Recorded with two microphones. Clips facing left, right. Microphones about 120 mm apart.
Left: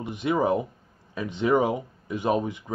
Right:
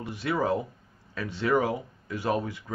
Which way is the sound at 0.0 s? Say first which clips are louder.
Left 4 dB; 20° left (ahead or behind).